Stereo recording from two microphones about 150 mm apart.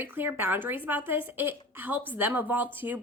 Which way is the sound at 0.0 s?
15° right (ahead or behind).